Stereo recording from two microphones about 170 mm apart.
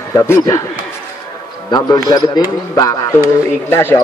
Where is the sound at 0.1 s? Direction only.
15° left (ahead or behind).